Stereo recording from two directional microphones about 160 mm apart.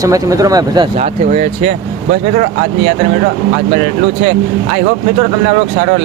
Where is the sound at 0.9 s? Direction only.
45° right (ahead or behind).